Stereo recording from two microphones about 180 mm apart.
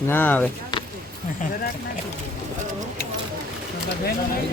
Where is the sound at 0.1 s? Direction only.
10° left (ahead or behind).